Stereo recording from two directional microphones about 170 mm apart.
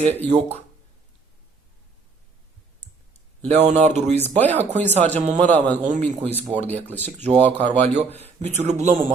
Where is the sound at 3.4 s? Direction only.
40° right (ahead or behind).